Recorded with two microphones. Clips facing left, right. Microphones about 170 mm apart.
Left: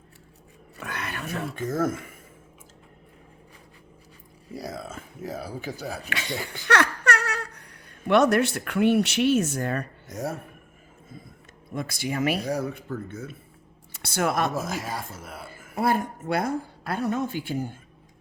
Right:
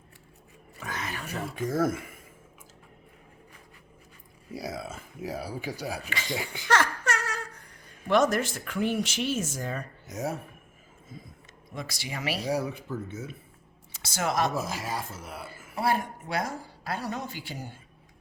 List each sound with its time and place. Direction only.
0.8 s a sound: 60° left (ahead or behind)
1.5 s speech: 5° right (ahead or behind)
4.5 s speech: 5° right (ahead or behind)
6.1 s speech: 65° left (ahead or behind)
6.3 s speech: 10° right (ahead or behind)
6.7 s speech: 70° left (ahead or behind)
10.1 s a man's voice: 5° right (ahead or behind)
11.7 s a woman's voice: 50° left (ahead or behind)
12.5 s a man's voice: 5° right (ahead or behind)
13.9 s speech: 60° left (ahead or behind)
14.5 s a man's voice: centre (ahead or behind)
15.4 s a woman's voice: 50° left (ahead or behind)